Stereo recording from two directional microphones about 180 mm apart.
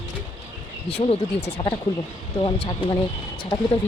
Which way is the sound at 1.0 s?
30° left (ahead or behind).